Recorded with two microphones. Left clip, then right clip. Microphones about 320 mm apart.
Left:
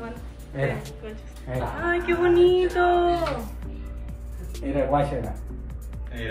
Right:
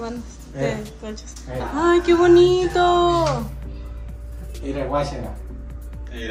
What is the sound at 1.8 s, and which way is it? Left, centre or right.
Music, centre.